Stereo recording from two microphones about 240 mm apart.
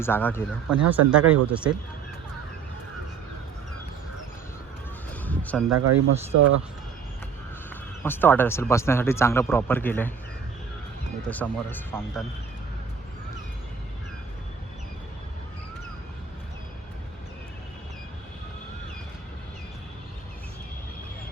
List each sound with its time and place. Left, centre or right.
0.0 s speech: centre
0.7 s speech: centre
5.2 s a sound: centre
5.7 s speech: right
7.7 s speech: centre
11.3 s speech: centre